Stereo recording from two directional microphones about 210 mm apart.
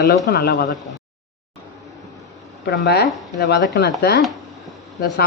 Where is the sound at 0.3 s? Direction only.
50° left (ahead or behind).